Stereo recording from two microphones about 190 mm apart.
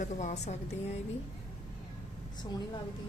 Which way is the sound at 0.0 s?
40° left (ahead or behind).